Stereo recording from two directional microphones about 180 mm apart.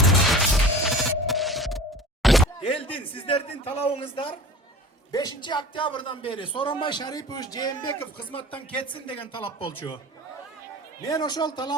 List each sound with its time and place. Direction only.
0.5 s music: centre (ahead or behind)
2.2 s a sound: centre (ahead or behind)
2.6 s a man's voice: 30° left (ahead or behind)
11.1 s a man's voice: 25° left (ahead or behind)